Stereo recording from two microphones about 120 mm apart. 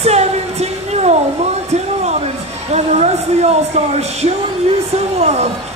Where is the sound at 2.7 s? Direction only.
65° right (ahead or behind).